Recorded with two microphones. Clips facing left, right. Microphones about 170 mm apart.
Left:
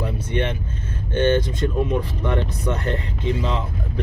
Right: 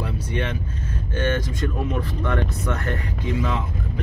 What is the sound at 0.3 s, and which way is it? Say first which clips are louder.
Speech: left 4 dB; 25° left (ahead or behind).